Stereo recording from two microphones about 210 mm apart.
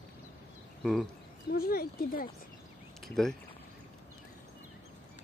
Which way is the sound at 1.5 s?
45° left (ahead or behind).